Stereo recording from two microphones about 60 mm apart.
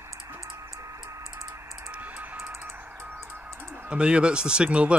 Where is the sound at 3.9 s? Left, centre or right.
Centre.